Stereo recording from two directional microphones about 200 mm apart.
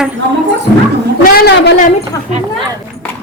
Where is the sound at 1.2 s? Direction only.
50° left (ahead or behind).